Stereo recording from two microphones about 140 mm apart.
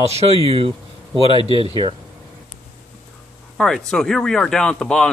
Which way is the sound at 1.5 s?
35° left (ahead or behind).